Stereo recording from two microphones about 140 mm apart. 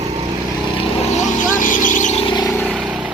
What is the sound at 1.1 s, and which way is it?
Vehicle, 70° left (ahead or behind).